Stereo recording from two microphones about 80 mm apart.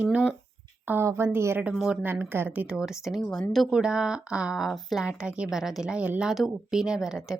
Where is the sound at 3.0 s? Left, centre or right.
Centre.